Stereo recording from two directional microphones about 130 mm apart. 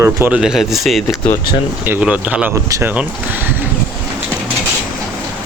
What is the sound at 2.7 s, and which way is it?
Speech, 25° right (ahead or behind).